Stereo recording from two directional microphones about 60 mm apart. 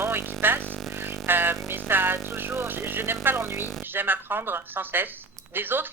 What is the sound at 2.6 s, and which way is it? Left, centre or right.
A man's voice, right.